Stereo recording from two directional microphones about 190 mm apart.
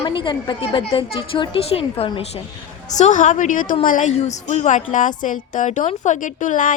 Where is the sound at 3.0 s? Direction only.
40° left (ahead or behind).